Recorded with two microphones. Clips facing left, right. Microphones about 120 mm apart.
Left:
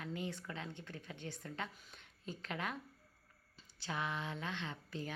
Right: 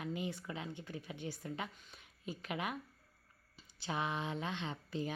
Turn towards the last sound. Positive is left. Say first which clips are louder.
# right 4 dB
turn(degrees=-20)  # may be behind; listen again after turning